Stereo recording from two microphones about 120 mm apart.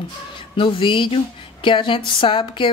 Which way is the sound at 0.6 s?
45° left (ahead or behind).